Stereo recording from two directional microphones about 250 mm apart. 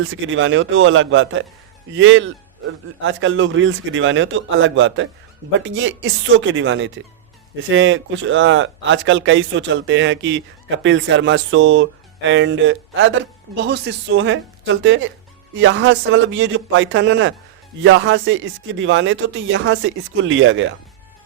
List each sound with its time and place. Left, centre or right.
0.0 s speech: right